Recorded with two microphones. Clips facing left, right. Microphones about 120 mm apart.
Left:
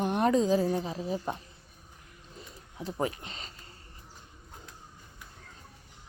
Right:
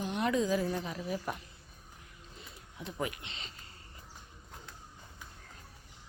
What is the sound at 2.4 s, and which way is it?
Speech, 35° left (ahead or behind).